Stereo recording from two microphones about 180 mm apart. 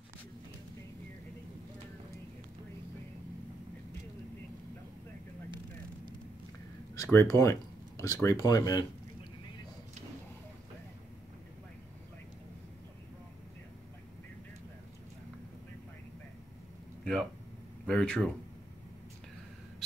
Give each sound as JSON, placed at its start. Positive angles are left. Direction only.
{"t": 7.0, "sound": "speech", "side_deg": 15}
{"t": 17.0, "sound": "a sound", "side_deg": 5}
{"t": 17.8, "sound": "speech", "side_deg": 5}